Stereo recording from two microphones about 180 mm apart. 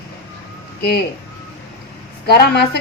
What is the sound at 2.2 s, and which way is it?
Speech, 65° left (ahead or behind).